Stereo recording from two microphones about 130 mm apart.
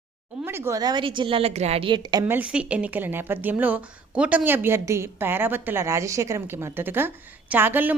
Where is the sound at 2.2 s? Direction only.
10° right (ahead or behind).